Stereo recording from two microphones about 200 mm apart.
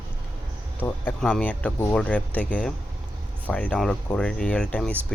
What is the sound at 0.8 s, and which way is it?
Speech, 10° left (ahead or behind).